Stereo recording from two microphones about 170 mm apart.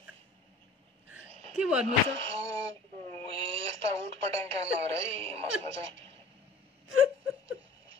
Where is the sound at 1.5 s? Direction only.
5° right (ahead or behind).